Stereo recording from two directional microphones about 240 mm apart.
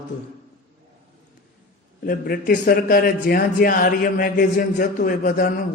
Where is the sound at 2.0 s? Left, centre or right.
Left.